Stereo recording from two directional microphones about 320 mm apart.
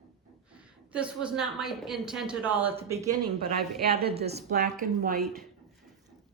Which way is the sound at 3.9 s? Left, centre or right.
Right.